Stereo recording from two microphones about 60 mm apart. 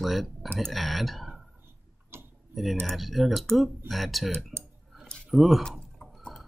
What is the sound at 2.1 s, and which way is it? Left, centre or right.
Tick-tock, right.